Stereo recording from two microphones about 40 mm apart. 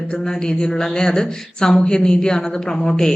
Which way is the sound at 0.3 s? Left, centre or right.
Centre.